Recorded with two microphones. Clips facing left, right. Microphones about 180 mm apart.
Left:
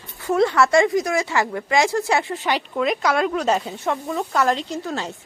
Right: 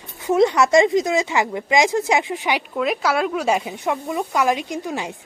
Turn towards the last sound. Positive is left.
turn(degrees=-15)  # may be behind; listen again after turning